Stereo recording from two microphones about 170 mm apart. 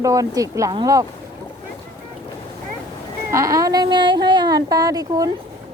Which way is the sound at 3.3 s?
20° right (ahead or behind).